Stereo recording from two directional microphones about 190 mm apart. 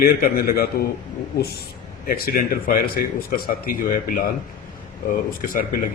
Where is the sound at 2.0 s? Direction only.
50° left (ahead or behind).